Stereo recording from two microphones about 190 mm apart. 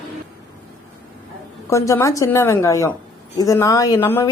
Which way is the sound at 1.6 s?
15° left (ahead or behind).